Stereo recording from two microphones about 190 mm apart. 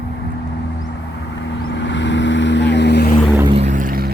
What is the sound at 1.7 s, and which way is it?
Vehicle, 70° left (ahead or behind).